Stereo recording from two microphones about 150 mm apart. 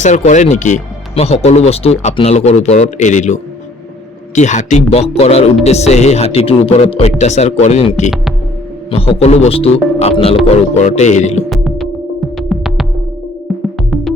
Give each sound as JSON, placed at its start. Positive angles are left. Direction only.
{"t": 0.0, "sound": "speech", "side_deg": 55}
{"t": 11.4, "sound": "music", "side_deg": 0}